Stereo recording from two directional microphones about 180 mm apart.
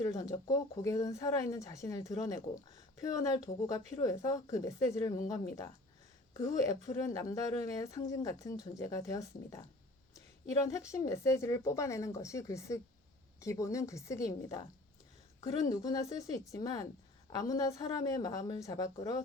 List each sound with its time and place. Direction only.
0.0 s a woman's voice: 20° left (ahead or behind)